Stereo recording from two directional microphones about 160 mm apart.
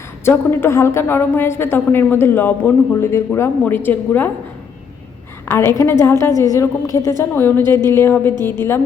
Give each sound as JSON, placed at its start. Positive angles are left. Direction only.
{"t": 0.3, "sound": "a woman's voice", "side_deg": 15}
{"t": 5.5, "sound": "a woman's voice", "side_deg": 15}